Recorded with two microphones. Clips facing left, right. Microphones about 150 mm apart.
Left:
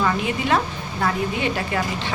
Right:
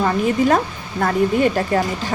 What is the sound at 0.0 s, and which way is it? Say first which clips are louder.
A woman's voice: right 5 dB; 40° right (ahead or behind).